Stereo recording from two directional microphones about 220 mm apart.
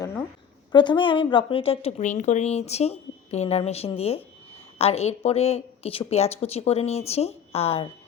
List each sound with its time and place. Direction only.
0.7 s a woman's voice: 20° left (ahead or behind)